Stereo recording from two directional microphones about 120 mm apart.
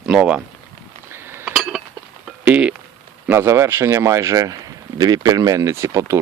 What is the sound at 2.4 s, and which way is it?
Speech, 10° right (ahead or behind).